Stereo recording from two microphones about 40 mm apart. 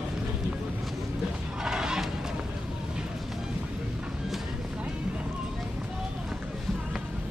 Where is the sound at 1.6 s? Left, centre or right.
Centre.